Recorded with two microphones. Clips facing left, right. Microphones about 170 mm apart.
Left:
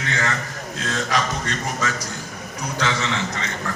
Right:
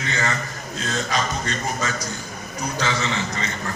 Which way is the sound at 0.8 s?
80° left.